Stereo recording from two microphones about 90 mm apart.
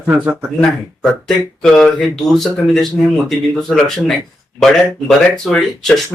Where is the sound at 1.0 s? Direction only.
5° left (ahead or behind).